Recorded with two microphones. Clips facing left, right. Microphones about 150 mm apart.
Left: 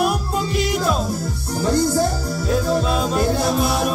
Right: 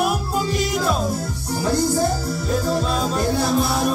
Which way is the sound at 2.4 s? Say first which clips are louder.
Left 3 dB; 5° left (ahead or behind).